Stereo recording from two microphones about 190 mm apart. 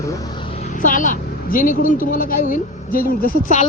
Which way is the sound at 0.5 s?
40° left (ahead or behind).